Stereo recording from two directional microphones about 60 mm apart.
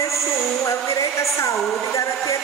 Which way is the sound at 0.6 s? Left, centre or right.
Left.